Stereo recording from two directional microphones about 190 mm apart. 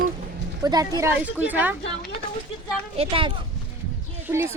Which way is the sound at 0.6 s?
20° right (ahead or behind).